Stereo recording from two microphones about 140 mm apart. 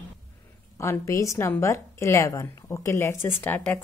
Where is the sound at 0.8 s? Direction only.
20° left (ahead or behind).